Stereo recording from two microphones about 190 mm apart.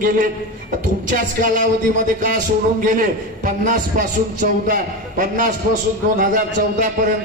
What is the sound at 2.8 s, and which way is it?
A man's voice, 45° right (ahead or behind).